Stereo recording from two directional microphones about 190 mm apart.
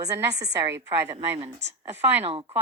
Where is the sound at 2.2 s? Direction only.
30° right (ahead or behind).